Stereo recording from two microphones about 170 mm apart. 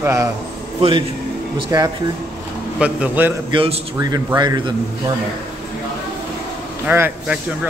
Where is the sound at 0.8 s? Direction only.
30° right (ahead or behind).